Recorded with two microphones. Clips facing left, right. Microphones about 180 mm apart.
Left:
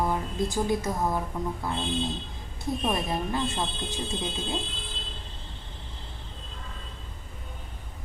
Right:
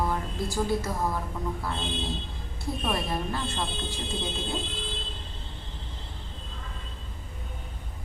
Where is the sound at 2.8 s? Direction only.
20° left (ahead or behind).